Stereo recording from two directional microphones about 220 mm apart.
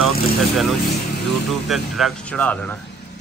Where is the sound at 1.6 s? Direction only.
Centre (ahead or behind).